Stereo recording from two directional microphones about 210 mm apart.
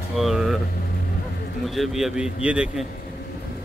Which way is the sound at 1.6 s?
Centre (ahead or behind).